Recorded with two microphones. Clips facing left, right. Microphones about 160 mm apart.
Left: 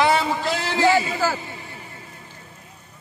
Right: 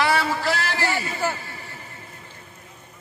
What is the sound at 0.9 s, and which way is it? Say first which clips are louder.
Speech: left 6 dB; 90° left.